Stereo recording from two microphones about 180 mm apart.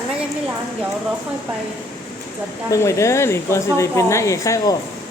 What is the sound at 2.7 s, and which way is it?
A woman's voice, 15° left (ahead or behind).